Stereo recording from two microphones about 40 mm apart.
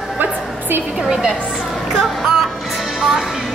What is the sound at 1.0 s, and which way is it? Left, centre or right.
Speech, centre.